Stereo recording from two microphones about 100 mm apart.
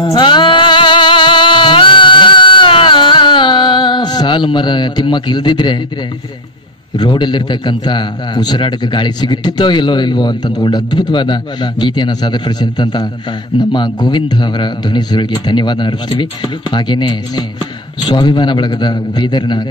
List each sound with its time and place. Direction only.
0.0 s music: 50° left (ahead or behind)
7.0 s a man's voice: 50° left (ahead or behind)